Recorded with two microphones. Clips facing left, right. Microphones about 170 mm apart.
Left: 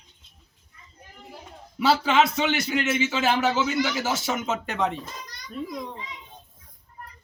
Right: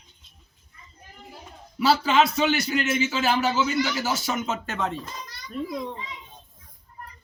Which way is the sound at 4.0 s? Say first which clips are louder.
Even; 20° left (ahead or behind).